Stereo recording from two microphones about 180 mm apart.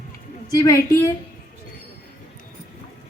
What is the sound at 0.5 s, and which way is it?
Speech, 20° left (ahead or behind).